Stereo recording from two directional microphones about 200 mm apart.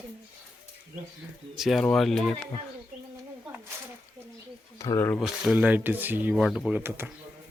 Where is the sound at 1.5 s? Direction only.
Centre (ahead or behind).